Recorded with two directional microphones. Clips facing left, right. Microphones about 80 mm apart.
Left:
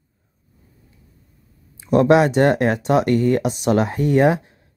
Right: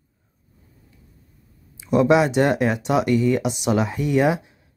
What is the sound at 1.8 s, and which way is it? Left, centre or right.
Speech, left.